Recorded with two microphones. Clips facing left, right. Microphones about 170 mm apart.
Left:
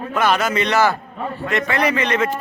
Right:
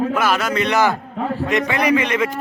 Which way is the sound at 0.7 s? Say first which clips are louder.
Right 1 dB; 15° right (ahead or behind).